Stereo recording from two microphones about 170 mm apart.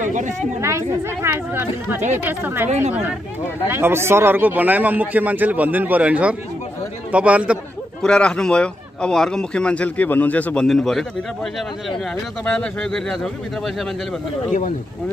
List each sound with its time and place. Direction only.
0.0 s a woman's voice: 45° right (ahead or behind)
0.6 s a man's voice: 15° right (ahead or behind)
8.0 s speech: 5° left (ahead or behind)